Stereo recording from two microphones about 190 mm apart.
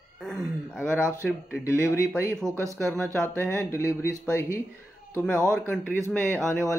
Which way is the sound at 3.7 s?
15° left (ahead or behind).